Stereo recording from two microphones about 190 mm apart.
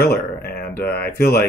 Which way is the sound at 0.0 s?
55° left (ahead or behind).